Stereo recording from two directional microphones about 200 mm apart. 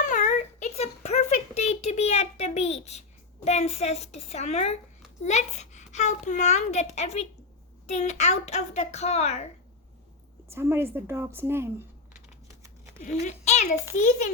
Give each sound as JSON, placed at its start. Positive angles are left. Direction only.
{"t": 0.1, "sound": "a sound", "side_deg": 35}
{"t": 3.4, "sound": "a child's voice", "side_deg": 35}
{"t": 10.5, "sound": "a woman's voice", "side_deg": -10}
{"t": 13.0, "sound": "a child's voice", "side_deg": 35}